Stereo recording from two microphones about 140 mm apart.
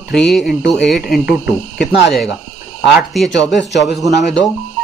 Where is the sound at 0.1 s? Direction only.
5° left (ahead or behind).